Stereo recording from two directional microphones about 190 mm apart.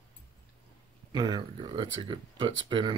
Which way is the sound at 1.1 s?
20° right (ahead or behind).